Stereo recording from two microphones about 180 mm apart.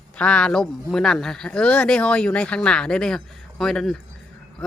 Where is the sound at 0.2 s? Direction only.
5° left (ahead or behind).